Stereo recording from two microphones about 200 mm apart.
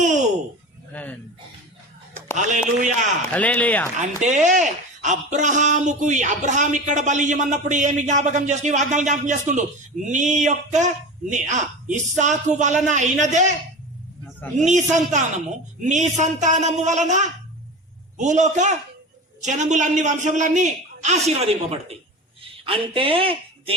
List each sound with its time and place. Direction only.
0.0 s a sound: 35° right (ahead or behind)
0.9 s speech: 5° left (ahead or behind)
2.3 s speech: 35° right (ahead or behind)
3.3 s speech: 10° left (ahead or behind)
3.9 s speech: 35° right (ahead or behind)
14.6 s speech: 35° right (ahead or behind)